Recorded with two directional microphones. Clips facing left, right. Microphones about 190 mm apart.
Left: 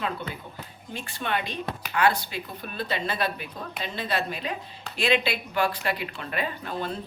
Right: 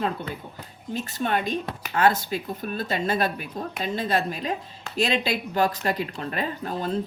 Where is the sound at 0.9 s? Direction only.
40° right (ahead or behind).